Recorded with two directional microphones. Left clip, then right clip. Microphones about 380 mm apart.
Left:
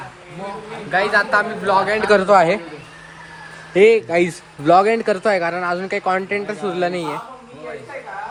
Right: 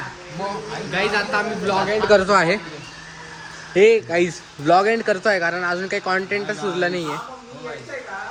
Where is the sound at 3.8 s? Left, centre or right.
Centre.